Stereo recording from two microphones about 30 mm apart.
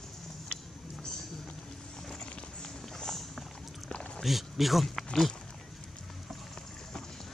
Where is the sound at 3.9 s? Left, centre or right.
Left.